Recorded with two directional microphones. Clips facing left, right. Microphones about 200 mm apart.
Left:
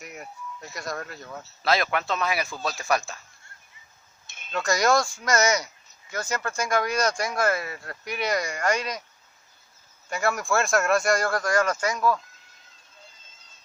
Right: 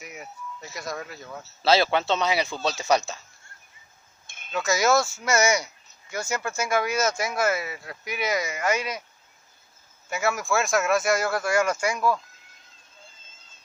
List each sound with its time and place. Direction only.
0.0 s speech: centre (ahead or behind)
1.6 s speech: 30° right (ahead or behind)
4.5 s speech: 5° right (ahead or behind)
10.0 s speech: 5° right (ahead or behind)